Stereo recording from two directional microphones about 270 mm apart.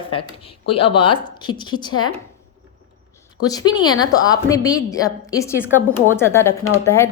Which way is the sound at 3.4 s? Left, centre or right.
Centre.